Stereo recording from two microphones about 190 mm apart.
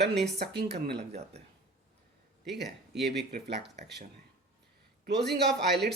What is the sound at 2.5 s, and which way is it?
Speech, 60° right (ahead or behind).